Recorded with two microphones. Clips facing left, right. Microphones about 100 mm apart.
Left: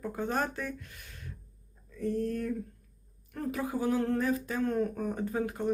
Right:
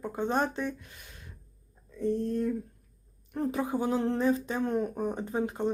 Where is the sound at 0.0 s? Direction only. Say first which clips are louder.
Right 3 dB; 20° right (ahead or behind).